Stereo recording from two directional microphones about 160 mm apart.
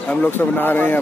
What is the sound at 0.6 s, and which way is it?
Speech, 10° left (ahead or behind).